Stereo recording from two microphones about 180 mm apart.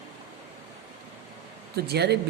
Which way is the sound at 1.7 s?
65° right (ahead or behind).